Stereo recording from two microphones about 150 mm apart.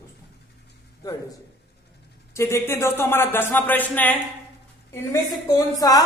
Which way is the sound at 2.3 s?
20° left (ahead or behind).